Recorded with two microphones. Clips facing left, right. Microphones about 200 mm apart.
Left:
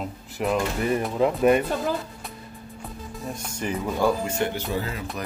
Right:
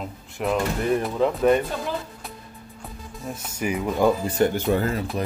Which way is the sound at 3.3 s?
5° right (ahead or behind).